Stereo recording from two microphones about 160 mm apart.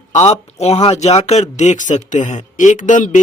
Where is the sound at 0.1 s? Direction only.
45° left (ahead or behind).